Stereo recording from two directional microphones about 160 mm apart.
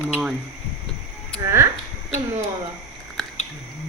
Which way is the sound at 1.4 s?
15° right (ahead or behind).